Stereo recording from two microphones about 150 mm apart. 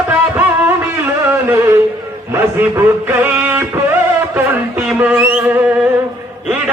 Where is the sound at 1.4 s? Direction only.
15° right (ahead or behind).